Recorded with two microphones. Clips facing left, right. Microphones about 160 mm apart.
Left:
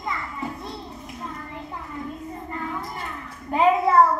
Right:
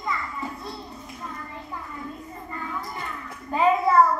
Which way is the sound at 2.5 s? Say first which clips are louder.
Left 2 dB; 20° left (ahead or behind).